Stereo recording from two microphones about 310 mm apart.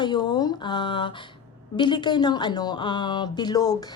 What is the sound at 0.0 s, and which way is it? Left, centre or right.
Speech, centre.